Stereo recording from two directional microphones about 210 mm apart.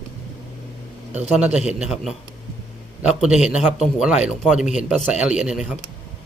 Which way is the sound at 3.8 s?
5° right (ahead or behind).